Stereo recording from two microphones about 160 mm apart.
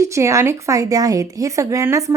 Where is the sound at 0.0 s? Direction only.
20° right (ahead or behind).